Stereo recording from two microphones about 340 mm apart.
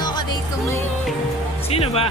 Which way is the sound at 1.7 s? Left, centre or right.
Centre.